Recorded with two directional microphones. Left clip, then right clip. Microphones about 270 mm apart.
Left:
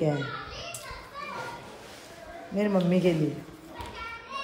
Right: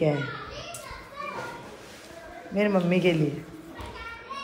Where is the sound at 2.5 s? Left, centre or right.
Centre.